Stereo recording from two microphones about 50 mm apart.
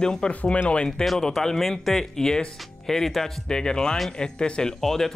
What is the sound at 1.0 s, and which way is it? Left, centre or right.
Speech, centre.